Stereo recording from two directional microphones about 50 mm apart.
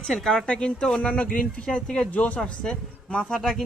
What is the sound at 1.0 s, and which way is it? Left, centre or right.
A man's voice, left.